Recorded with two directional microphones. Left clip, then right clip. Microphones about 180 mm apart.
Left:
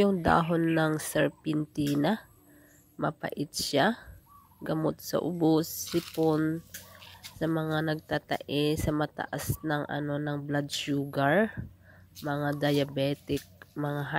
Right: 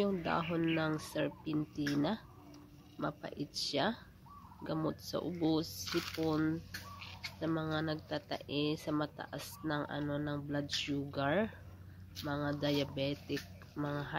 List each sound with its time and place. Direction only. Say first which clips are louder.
0.0 s speech: left 10 dB; 55° left (ahead or behind)
5.9 s speech: left 7 dB; 5° left (ahead or behind)
6.3 s fowl: left 6 dB; 30° left (ahead or behind)
7.2 s speech: left 7 dB; 45° left (ahead or behind)